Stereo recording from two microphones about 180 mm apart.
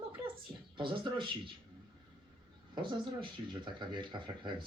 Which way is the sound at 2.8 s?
25° right (ahead or behind).